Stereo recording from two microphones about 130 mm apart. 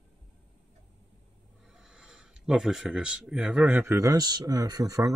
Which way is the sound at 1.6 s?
5° right (ahead or behind).